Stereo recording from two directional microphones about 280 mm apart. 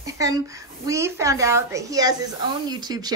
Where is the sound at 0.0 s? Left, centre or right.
Centre.